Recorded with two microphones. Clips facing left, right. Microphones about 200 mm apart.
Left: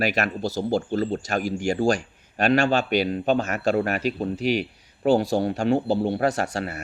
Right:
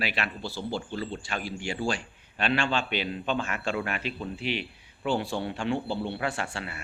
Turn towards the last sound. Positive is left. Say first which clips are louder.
# left 8 dB
turn(degrees=40)  # may be behind; listen again after turning